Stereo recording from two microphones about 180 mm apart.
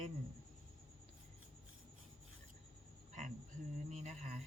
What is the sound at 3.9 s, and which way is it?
Speech, 40° right (ahead or behind).